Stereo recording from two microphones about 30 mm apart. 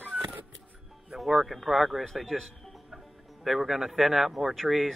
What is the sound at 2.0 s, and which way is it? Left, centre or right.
A man's voice, centre.